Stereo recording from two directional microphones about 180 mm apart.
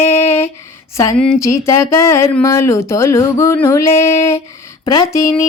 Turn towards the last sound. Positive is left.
turn(degrees=15)  # may be behind; listen again after turning